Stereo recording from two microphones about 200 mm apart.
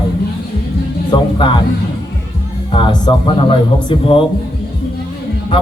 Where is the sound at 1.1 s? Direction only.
25° left (ahead or behind).